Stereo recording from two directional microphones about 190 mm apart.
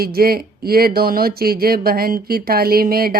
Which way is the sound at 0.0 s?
50° right (ahead or behind).